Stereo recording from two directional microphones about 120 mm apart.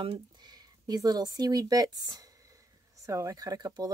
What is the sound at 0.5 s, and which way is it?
Speech, 35° right (ahead or behind).